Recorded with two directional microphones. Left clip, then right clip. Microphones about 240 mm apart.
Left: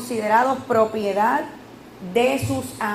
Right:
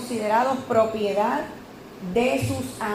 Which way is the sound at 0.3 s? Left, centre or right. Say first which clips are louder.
Left 3 dB; left.